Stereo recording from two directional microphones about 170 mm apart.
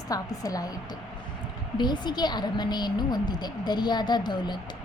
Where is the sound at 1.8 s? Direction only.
25° left (ahead or behind).